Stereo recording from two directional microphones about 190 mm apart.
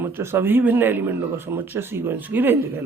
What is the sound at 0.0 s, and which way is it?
Speech, 10° right (ahead or behind).